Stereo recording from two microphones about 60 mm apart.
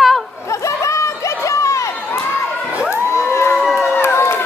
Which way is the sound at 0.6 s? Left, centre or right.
Left.